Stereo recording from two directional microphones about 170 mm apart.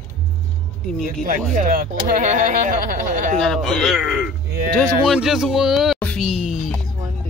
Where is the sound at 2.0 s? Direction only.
50° right (ahead or behind).